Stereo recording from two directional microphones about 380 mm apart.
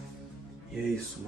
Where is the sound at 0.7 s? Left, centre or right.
Centre.